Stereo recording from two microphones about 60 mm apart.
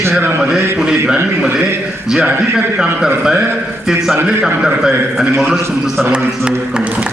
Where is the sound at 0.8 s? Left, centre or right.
Centre.